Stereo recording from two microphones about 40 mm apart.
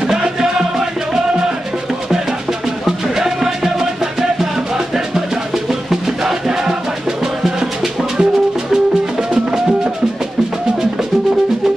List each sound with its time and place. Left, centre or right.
0.0 s music: centre
3.2 s music: centre
5.7 s music: centre